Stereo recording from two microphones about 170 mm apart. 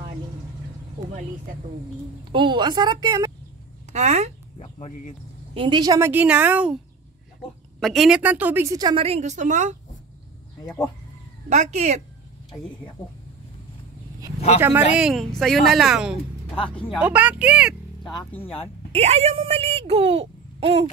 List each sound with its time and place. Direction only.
2.3 s a woman's voice: 30° right (ahead or behind)
3.9 s speech: 40° right (ahead or behind)
4.6 s speech: 40° left (ahead or behind)
5.5 s a woman's voice: 30° right (ahead or behind); by 6.8 s 10° right (ahead or behind)
7.8 s a woman's voice: centre (ahead or behind); by 9.0 s 25° right (ahead or behind)
9.0 s a woman's voice: 40° right (ahead or behind)
11.4 s a woman's voice: 45° right (ahead or behind)
14.6 s a woman's voice: 15° right (ahead or behind)
15.0 s speech: centre (ahead or behind)
16.5 s speech: 30° left (ahead or behind)
17.0 s speech: 10° right (ahead or behind)
18.3 s speech: 10° left (ahead or behind)
18.9 s speech: 40° right (ahead or behind)